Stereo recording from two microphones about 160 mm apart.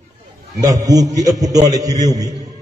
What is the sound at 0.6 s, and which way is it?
A man's voice, 20° right (ahead or behind).